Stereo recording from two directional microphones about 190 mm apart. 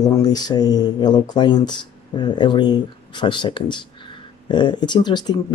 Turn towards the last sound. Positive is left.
turn(degrees=20)  # may be behind; listen again after turning